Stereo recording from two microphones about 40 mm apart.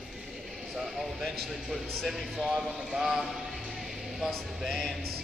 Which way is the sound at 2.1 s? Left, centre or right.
Centre.